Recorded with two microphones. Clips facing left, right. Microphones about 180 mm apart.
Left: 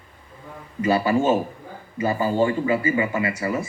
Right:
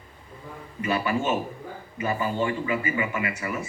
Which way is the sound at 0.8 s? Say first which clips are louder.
Left 6 dB; 35° left (ahead or behind).